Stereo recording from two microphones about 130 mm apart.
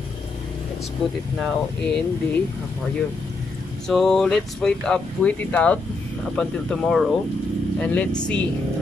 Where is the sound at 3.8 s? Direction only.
5° left (ahead or behind).